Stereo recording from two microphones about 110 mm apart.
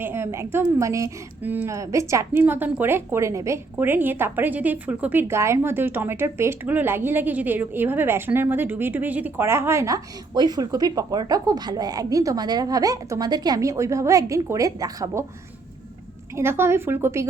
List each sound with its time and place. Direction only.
0.0 s a woman's voice: 20° right (ahead or behind)
1.4 s speech: 15° right (ahead or behind)
1.7 s a woman's voice: 30° right (ahead or behind)
2.4 s a woman's voice: 15° right (ahead or behind); by 15.2 s 30° right (ahead or behind)
16.3 s a woman's voice: 20° right (ahead or behind)